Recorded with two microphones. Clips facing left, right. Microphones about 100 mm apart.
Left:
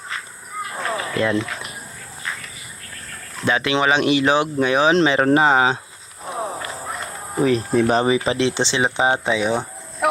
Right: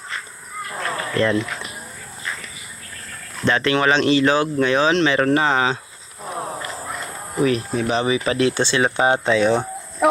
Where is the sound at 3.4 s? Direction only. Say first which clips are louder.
Right 1 dB; 10° left (ahead or behind).